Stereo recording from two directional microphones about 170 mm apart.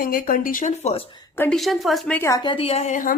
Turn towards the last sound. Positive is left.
turn(degrees=45)  # may be behind; listen again after turning